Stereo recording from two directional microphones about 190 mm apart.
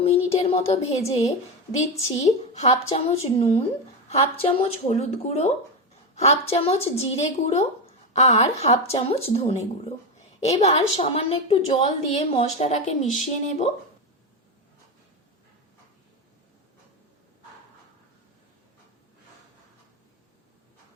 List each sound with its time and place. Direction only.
0.0 s a woman's voice: 30° left (ahead or behind)
10.6 s a woman's voice: 35° left (ahead or behind)